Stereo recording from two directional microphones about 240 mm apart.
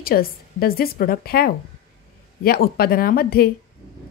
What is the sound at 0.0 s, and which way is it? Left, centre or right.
Speech, left.